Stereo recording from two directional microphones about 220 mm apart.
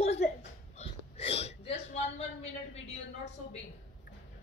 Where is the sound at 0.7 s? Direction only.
25° left (ahead or behind).